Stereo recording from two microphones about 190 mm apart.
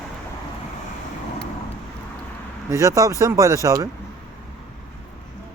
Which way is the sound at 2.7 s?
15° right (ahead or behind).